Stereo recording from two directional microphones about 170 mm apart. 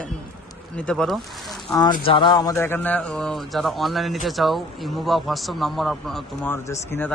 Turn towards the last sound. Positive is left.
turn(degrees=10)  # may be behind; listen again after turning